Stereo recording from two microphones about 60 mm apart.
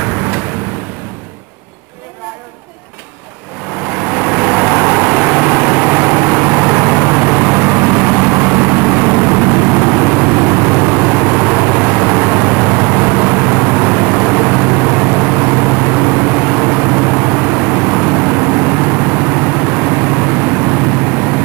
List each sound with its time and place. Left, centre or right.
4.0 s vehicle: right